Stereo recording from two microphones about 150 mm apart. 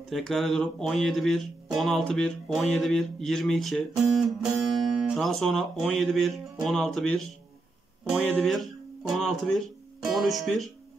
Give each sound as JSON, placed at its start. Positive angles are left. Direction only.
{"t": 0.1, "sound": "speech", "side_deg": 0}